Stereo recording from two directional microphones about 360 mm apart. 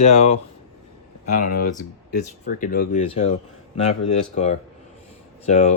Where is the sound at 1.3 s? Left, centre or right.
Left.